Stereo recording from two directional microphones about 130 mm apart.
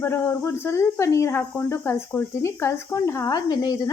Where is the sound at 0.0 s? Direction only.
20° left (ahead or behind).